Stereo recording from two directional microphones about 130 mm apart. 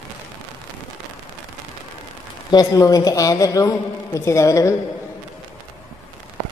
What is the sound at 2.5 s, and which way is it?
A man's voice, 30° left (ahead or behind).